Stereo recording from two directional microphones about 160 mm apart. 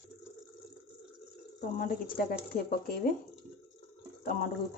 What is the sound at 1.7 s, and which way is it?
Speech, 65° left (ahead or behind).